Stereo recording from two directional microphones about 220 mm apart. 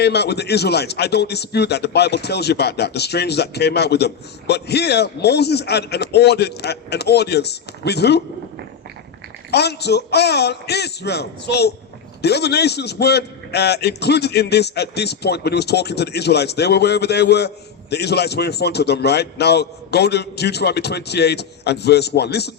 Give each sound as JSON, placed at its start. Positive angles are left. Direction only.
{"t": 0.0, "sound": "a man's voice", "side_deg": 50}
{"t": 9.5, "sound": "a man's voice", "side_deg": 50}